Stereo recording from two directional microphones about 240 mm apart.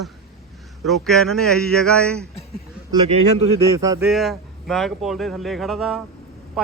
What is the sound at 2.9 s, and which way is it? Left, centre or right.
Speech, right.